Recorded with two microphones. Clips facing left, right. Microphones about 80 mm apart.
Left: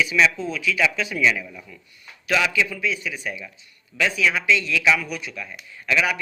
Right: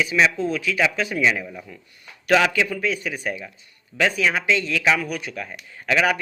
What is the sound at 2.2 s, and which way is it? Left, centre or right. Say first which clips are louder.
A man's voice: right 3 dB; right.